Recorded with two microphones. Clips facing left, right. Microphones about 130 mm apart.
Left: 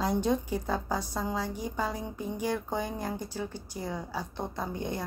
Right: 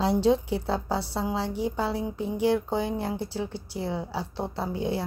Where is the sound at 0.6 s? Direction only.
10° right (ahead or behind).